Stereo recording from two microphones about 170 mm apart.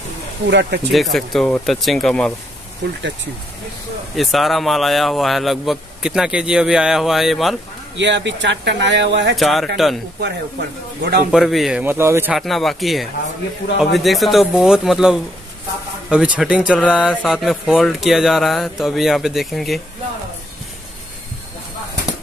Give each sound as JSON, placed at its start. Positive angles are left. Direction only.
{"t": 0.5, "sound": "speech", "side_deg": -90}
{"t": 0.9, "sound": "speech", "side_deg": 0}
{"t": 2.8, "sound": "speech", "side_deg": -90}
{"t": 4.1, "sound": "speech", "side_deg": 0}
{"t": 8.0, "sound": "speech", "side_deg": -90}
{"t": 9.3, "sound": "speech", "side_deg": 0}
{"t": 10.2, "sound": "speech", "side_deg": -75}
{"t": 11.3, "sound": "speech", "side_deg": 0}
{"t": 12.4, "sound": "speech", "side_deg": 0}